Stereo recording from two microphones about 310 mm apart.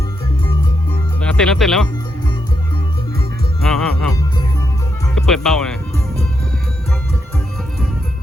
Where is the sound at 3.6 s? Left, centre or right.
Centre.